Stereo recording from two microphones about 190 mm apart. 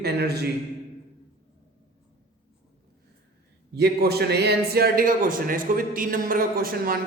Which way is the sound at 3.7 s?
55° right (ahead or behind).